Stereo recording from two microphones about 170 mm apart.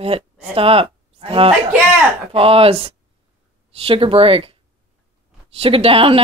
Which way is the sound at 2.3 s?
35° right (ahead or behind).